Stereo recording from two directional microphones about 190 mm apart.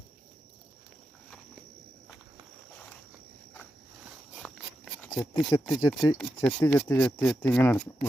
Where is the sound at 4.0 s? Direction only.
5° right (ahead or behind).